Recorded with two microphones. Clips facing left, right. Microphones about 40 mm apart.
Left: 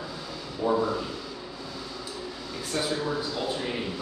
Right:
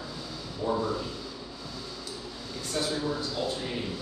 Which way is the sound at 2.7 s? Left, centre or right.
Left.